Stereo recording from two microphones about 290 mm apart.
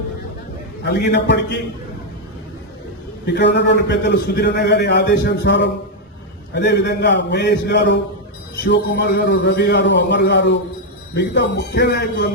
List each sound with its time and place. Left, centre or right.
0.9 s a man's voice: left
3.2 s a man's voice: left